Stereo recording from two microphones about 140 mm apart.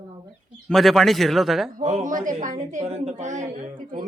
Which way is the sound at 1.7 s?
55° right (ahead or behind).